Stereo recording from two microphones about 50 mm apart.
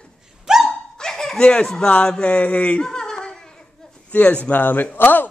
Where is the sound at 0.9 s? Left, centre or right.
Centre.